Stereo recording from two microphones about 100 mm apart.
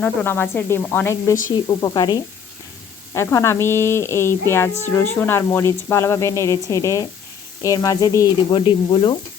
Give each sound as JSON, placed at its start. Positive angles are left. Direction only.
{"t": 0.3, "sound": "speech", "side_deg": 20}
{"t": 1.1, "sound": "speech", "side_deg": 30}
{"t": 3.2, "sound": "speech", "side_deg": 25}
{"t": 8.5, "sound": "speech", "side_deg": 55}